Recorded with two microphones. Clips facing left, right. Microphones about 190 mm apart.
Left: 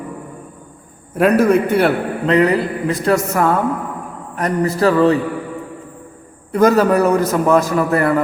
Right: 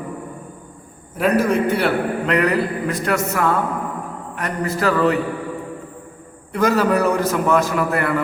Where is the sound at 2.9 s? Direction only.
35° left (ahead or behind).